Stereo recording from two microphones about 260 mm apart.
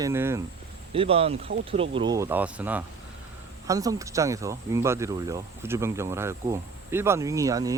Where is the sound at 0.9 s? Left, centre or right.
Right.